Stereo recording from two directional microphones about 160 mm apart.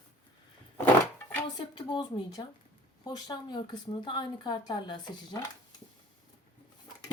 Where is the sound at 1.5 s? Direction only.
25° left (ahead or behind).